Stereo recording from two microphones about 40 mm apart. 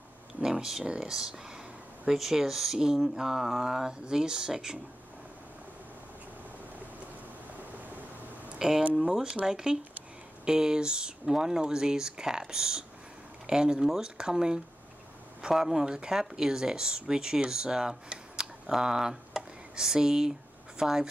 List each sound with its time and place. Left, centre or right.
0.4 s speech: centre
8.5 s speech: centre